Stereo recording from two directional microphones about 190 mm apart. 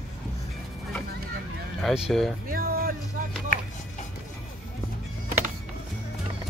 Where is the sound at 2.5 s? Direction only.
50° right (ahead or behind).